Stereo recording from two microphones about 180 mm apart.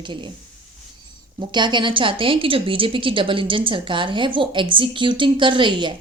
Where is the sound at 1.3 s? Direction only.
25° right (ahead or behind).